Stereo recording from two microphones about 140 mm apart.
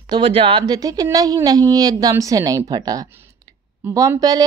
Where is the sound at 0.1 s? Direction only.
40° right (ahead or behind).